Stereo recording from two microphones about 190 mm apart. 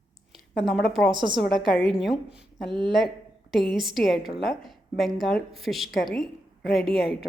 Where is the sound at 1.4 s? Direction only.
Centre (ahead or behind).